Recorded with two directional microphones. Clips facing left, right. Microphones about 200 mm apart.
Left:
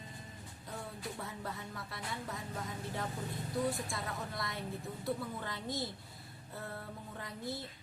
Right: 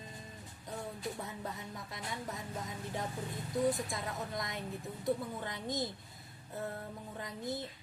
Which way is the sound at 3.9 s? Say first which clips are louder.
Right 2 dB; 20° right (ahead or behind).